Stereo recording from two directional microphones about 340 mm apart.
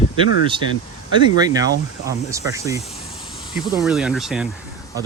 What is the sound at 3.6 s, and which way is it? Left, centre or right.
Speech, centre.